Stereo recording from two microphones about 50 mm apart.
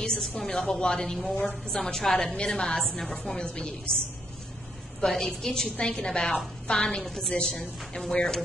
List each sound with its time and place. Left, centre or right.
0.4 s a woman's voice: centre
0.7 s a woman's voice: centre
1.3 s a woman's voice: left
1.8 s a woman's voice: centre
5.0 s a woman's voice: centre